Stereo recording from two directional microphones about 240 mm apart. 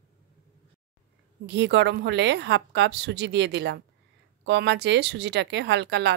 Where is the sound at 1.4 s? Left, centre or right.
Right.